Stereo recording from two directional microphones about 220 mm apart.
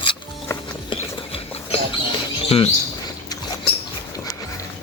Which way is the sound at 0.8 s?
25° left (ahead or behind).